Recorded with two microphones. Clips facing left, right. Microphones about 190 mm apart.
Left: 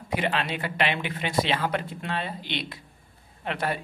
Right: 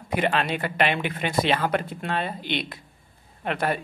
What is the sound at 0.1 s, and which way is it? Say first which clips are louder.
Speech: right 3 dB; 50° right (ahead or behind).